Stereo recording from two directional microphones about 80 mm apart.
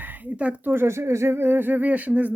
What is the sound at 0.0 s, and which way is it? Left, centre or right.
Speech, right.